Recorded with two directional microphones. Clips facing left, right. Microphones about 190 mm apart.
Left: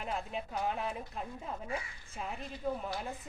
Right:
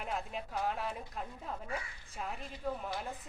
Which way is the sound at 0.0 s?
Centre (ahead or behind).